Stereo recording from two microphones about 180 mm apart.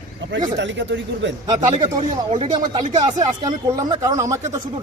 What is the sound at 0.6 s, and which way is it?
Speech, 90° right.